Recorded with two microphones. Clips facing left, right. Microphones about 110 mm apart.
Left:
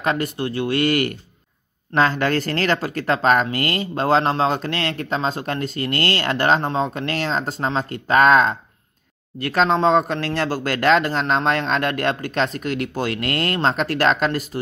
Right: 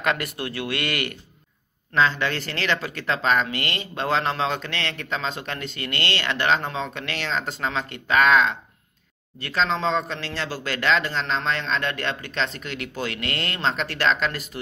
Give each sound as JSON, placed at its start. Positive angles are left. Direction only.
{"t": 0.0, "sound": "a man's voice", "side_deg": 35}